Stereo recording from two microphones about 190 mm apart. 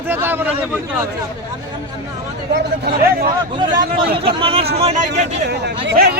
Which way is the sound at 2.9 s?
50° right (ahead or behind).